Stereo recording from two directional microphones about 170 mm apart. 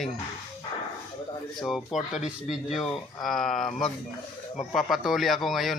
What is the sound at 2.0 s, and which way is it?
Speech, 40° left (ahead or behind).